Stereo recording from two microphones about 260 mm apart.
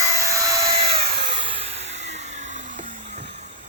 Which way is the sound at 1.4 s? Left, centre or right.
Right.